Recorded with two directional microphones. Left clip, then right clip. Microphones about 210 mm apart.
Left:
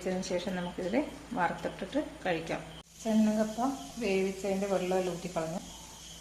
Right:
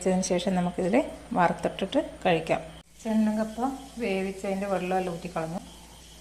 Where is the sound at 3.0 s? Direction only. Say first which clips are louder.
Right 1 dB; 10° right (ahead or behind).